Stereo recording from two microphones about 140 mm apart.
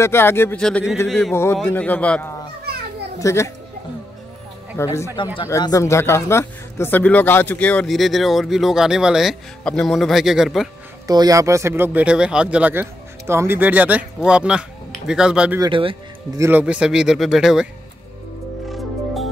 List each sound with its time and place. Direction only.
0.0 s speech: 15° left (ahead or behind)
0.6 s speech: 5° left (ahead or behind)
1.3 s speech: 20° left (ahead or behind)
3.2 s speech: 20° left (ahead or behind)
4.7 s speech: 20° left (ahead or behind)
7.9 s speech: centre (ahead or behind)
11.1 s speech: 25° right (ahead or behind); by 15.6 s 5° right (ahead or behind)
15.6 s a man's voice: 40° right (ahead or behind)
16.3 s speech: 15° right (ahead or behind)